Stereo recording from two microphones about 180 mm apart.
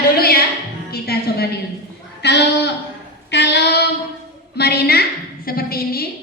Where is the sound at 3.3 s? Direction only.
70° left (ahead or behind).